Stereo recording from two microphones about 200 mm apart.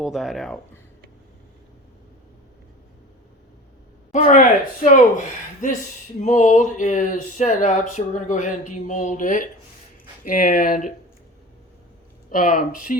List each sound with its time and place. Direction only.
0.0 s speech: centre (ahead or behind)
4.1 s speech: 40° left (ahead or behind)
6.2 s speech: 40° left (ahead or behind)
12.3 s speech: 45° left (ahead or behind)